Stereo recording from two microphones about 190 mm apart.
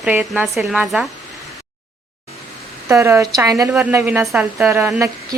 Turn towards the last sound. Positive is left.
turn(degrees=-10)  # may be behind; listen again after turning